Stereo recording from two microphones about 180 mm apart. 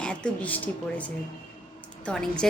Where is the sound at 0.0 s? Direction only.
5° left (ahead or behind).